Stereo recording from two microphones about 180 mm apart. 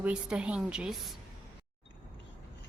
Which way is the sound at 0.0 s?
5° right (ahead or behind).